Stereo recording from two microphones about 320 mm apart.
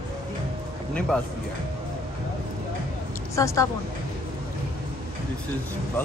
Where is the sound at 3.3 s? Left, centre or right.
Centre.